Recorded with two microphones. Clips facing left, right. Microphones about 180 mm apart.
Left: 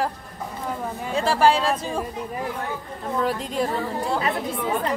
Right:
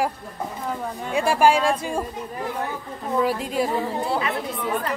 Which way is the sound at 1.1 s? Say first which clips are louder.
Right 1 dB; 15° right (ahead or behind).